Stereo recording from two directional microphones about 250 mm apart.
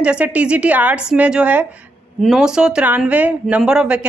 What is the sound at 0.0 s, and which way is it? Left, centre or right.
Speech, centre.